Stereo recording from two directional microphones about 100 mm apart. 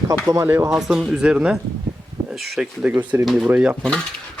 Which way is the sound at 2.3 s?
Centre (ahead or behind).